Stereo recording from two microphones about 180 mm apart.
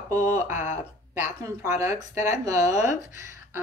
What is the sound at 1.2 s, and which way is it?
A woman's voice, 15° right (ahead or behind).